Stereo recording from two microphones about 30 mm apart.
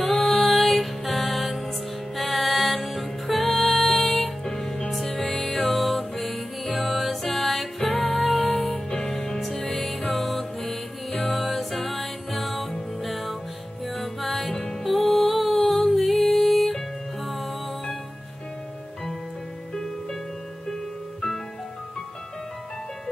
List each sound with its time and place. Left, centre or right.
0.0 s music: centre
4.6 s music: centre
4.9 s music: centre
9.0 s music: centre
11.1 s music: left
11.3 s music: centre
19.7 s music: centre